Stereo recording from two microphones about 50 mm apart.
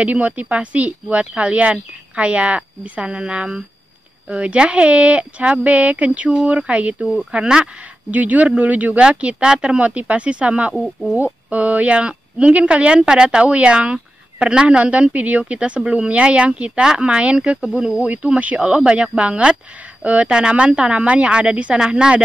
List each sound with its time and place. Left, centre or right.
0.0 s speech: right
8.1 s speech: right
10.7 s speech: centre
11.2 s speech: right
14.9 s speech: right